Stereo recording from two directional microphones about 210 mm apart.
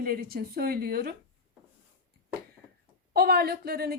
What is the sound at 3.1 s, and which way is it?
Speech, 45° right (ahead or behind).